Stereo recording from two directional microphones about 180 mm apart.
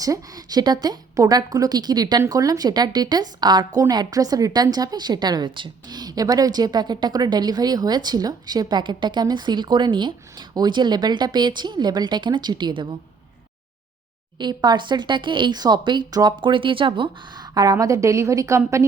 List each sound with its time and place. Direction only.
0.0 s a woman's voice: 20° right (ahead or behind)
14.3 s a woman's voice: 25° right (ahead or behind)